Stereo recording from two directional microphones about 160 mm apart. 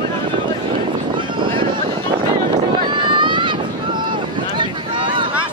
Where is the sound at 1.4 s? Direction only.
30° right (ahead or behind).